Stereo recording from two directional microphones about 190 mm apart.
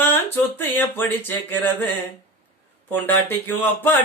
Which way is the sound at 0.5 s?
10° left (ahead or behind).